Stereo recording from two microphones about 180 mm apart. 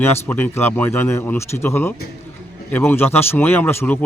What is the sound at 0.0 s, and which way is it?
Speech, 10° left (ahead or behind).